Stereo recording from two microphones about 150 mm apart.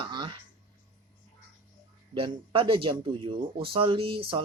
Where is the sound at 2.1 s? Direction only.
35° right (ahead or behind).